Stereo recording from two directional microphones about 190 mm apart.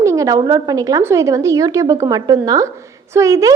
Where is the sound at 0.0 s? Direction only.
15° right (ahead or behind).